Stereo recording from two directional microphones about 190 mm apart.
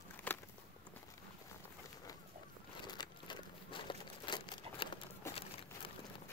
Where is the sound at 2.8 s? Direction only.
20° left (ahead or behind).